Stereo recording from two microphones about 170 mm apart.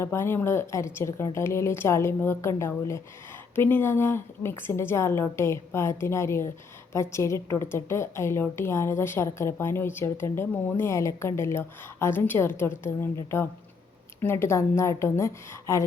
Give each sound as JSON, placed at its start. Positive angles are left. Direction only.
{"t": 0.0, "sound": "a woman's voice", "side_deg": 15}